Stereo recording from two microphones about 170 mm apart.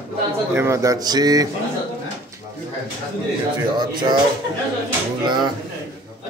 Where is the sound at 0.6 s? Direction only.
15° right (ahead or behind).